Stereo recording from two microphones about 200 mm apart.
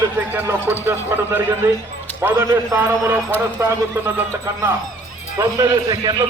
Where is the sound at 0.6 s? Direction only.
10° left (ahead or behind).